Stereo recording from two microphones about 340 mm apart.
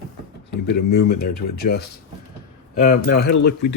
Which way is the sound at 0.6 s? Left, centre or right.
Left.